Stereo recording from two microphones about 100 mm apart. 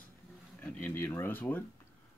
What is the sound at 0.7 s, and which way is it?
Speech, 20° left (ahead or behind).